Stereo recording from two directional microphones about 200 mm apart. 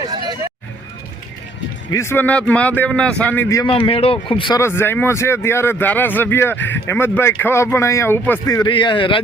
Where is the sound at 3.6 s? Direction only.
25° left (ahead or behind).